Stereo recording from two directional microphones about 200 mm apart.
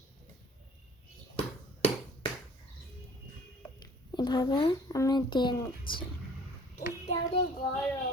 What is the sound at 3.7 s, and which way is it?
A woman's voice, 20° left (ahead or behind).